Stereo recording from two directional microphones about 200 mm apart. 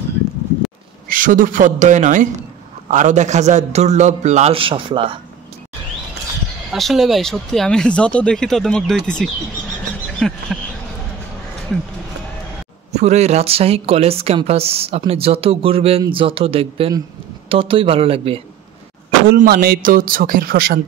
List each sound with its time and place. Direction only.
1.0 s a man's voice: 40° right (ahead or behind); by 5.2 s 25° right (ahead or behind)
6.7 s speech: centre (ahead or behind)
10.1 s a sound: centre (ahead or behind)
12.9 s speech: 35° right (ahead or behind)
19.2 s speech: 50° right (ahead or behind)